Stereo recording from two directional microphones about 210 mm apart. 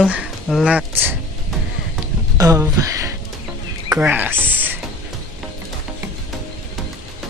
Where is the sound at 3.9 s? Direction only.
10° right (ahead or behind).